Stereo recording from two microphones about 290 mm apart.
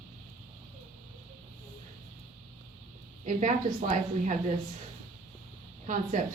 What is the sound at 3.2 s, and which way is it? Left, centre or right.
A woman's voice, right.